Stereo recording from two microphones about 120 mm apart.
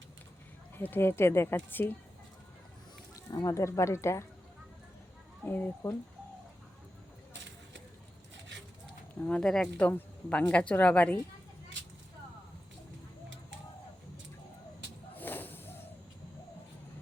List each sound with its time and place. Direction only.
0.8 s speech: 15° left (ahead or behind)
3.2 s speech: 30° left (ahead or behind)
5.5 s speech: 15° left (ahead or behind)
9.2 s speech: 10° left (ahead or behind)
15.1 s a sound: 15° left (ahead or behind)